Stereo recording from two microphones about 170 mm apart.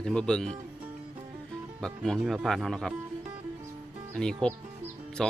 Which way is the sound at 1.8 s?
5° left (ahead or behind).